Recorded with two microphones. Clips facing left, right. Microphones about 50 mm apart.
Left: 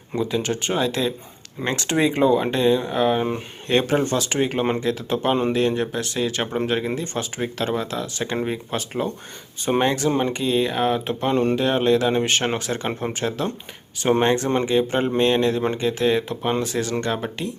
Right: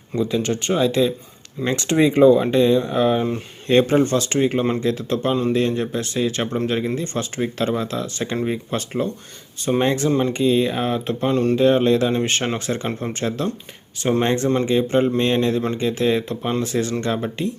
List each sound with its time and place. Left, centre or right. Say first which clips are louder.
0.1 s speech: right 2 dB; centre
3.2 s speech: right 1 dB; centre
3.7 s speech: right 4 dB; centre
5.0 s speech: left 2 dB; centre
10.1 s speech: right 2 dB; centre
10.3 s speech: right 3 dB; centre
11.5 s speech: right 3 dB; centre